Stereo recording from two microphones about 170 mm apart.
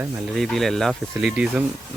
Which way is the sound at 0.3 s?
Centre (ahead or behind).